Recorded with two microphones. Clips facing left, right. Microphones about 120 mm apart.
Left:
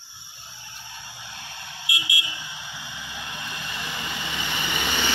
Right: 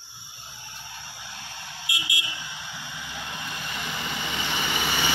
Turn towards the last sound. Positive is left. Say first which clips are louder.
# even
turn(degrees=-10)  # may be behind; listen again after turning